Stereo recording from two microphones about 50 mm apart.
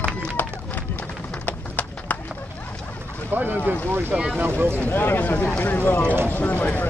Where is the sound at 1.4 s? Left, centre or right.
Left.